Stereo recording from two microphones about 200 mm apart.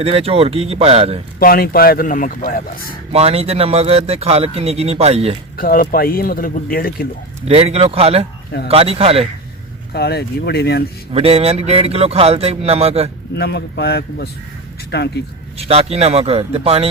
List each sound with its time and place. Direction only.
0.0 s speech: 30° right (ahead or behind)
1.4 s speech: 45° left (ahead or behind)
3.1 s speech: 30° right (ahead or behind)
5.5 s speech: 45° left (ahead or behind)
7.4 s speech: 30° right (ahead or behind)
9.9 s speech: 55° left (ahead or behind)
11.1 s speech: 30° right (ahead or behind)
13.3 s speech: 55° left (ahead or behind)
15.5 s speech: 30° right (ahead or behind)